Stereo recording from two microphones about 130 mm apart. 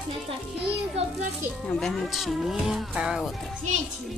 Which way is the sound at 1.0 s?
50° right (ahead or behind).